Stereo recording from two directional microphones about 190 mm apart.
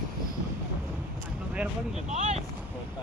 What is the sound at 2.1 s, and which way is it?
Speech, 40° right (ahead or behind).